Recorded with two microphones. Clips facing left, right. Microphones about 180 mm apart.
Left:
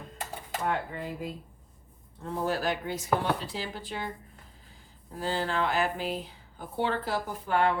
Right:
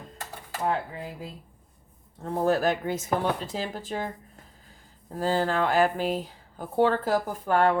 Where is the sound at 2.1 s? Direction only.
45° right (ahead or behind).